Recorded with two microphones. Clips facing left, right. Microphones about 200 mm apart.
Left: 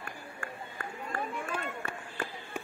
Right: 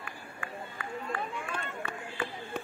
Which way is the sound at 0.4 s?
45° left (ahead or behind).